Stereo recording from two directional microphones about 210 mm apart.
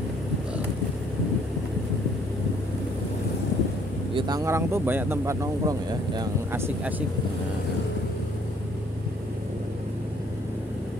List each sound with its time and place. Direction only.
4.1 s speech: 20° right (ahead or behind)